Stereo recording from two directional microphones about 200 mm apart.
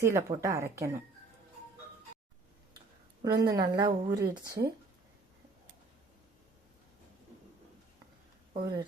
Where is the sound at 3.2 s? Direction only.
20° right (ahead or behind).